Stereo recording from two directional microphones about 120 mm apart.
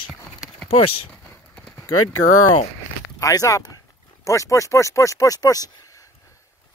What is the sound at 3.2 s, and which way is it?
Speech, 30° left (ahead or behind).